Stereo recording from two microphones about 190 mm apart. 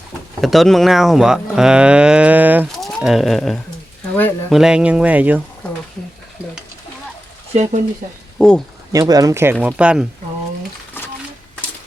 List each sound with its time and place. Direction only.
0.4 s speech: centre (ahead or behind)
7.5 s speech: 35° right (ahead or behind)
8.4 s speech: 5° left (ahead or behind)
8.9 s speech: 20° right (ahead or behind)